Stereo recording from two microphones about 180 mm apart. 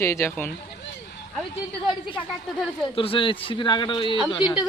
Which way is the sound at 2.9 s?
30° left (ahead or behind).